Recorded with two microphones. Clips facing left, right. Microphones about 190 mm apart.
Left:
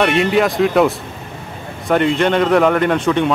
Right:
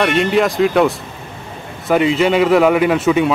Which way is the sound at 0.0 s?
Centre (ahead or behind).